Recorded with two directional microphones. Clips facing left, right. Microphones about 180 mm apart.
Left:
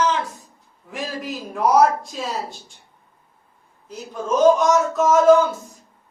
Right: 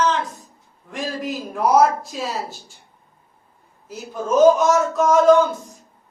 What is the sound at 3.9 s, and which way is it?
A man's voice, 5° right (ahead or behind).